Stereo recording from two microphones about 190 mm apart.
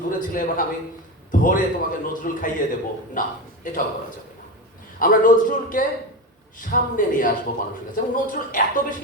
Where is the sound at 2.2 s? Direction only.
45° left (ahead or behind).